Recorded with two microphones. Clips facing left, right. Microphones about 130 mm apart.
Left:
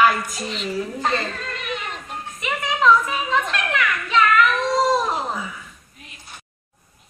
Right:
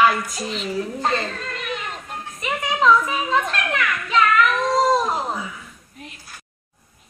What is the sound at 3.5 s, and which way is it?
Children playing, 35° right (ahead or behind).